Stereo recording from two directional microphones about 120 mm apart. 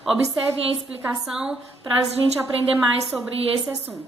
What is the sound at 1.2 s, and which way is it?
Speech, 5° right (ahead or behind).